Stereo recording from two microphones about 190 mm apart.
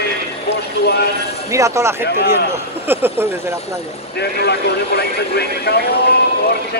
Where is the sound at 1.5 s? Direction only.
15° right (ahead or behind).